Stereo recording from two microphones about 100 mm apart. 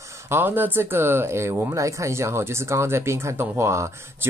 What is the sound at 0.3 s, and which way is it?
Speech, 20° right (ahead or behind).